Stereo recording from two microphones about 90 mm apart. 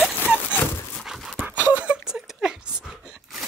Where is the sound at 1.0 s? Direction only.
Centre (ahead or behind).